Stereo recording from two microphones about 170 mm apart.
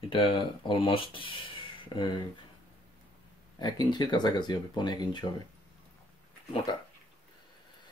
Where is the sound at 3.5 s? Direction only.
25° left (ahead or behind).